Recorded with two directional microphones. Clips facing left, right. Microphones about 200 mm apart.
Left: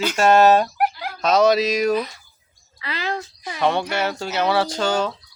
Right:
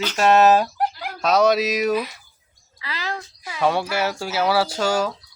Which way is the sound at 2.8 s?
25° left (ahead or behind).